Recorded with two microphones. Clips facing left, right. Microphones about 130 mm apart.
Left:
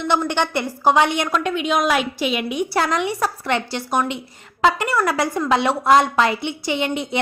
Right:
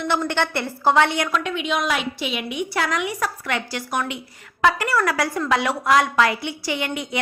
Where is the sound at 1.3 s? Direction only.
45° left (ahead or behind).